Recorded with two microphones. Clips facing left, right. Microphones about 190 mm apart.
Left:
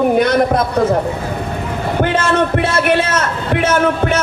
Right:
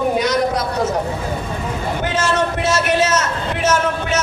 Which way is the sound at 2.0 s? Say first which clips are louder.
Left 4 dB; 55° left (ahead or behind).